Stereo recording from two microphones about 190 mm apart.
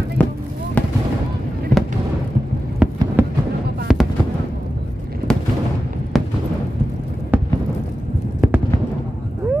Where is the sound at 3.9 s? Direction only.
Centre (ahead or behind).